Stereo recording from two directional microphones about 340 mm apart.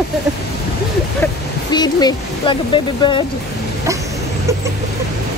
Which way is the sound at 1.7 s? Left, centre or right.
Centre.